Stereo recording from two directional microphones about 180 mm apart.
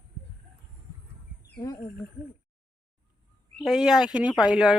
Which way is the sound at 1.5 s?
20° left (ahead or behind).